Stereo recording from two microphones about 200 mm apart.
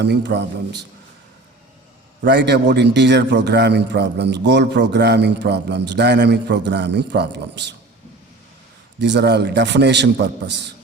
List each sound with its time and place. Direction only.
0.0 s a man's voice: 55° right (ahead or behind)
2.2 s a man's voice: 60° right (ahead or behind)
9.0 s a man's voice: 60° right (ahead or behind)